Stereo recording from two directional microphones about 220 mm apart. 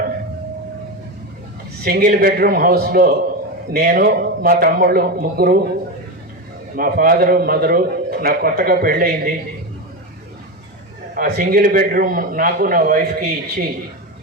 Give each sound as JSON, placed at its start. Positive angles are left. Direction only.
{"t": 1.8, "sound": "a man's voice", "side_deg": -40}
{"t": 6.7, "sound": "a man's voice", "side_deg": -40}
{"t": 11.1, "sound": "a man's voice", "side_deg": -40}